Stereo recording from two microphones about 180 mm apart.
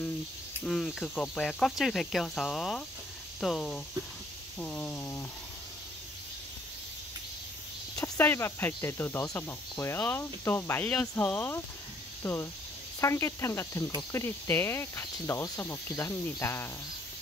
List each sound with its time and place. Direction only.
0.7 s speech: 5° left (ahead or behind)
7.9 s speech: 10° left (ahead or behind)